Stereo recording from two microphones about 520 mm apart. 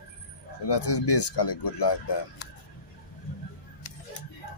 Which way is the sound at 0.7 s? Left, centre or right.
Left.